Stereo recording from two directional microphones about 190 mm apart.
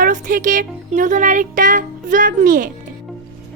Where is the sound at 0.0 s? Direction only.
45° right (ahead or behind).